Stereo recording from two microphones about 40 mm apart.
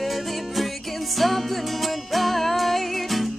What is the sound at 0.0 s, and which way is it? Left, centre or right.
Music, centre.